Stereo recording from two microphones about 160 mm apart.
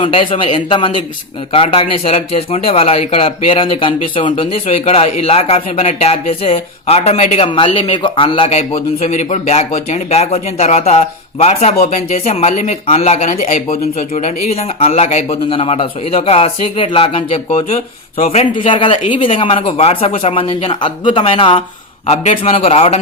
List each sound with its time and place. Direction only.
0.0 s speech: 35° left (ahead or behind)